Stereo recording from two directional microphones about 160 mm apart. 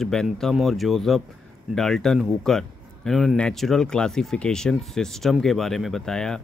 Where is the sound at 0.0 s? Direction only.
5° left (ahead or behind).